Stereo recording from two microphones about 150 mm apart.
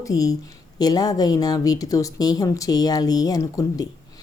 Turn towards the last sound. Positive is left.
turn(degrees=25)  # may be behind; listen again after turning